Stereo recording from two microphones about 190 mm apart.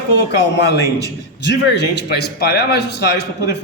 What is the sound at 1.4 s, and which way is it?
A man's voice, 65° left (ahead or behind).